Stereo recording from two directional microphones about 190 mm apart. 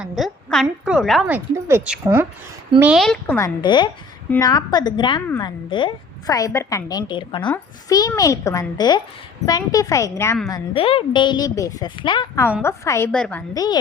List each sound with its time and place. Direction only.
0.0 s a woman's voice: centre (ahead or behind)
1.5 s a woman's voice: 15° right (ahead or behind); by 3.3 s centre (ahead or behind)
3.3 s a woman's voice: 20° left (ahead or behind)
10.5 s a woman's voice: 30° left (ahead or behind); by 13.4 s 5° left (ahead or behind)
13.5 s a woman's voice: 20° left (ahead or behind)